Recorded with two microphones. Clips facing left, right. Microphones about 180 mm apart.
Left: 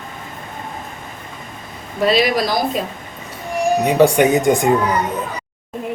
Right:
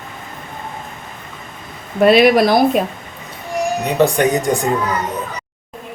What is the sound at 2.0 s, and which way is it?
Speech, 60° right (ahead or behind).